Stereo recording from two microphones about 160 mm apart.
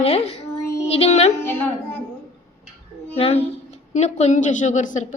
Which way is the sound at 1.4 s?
15° left (ahead or behind).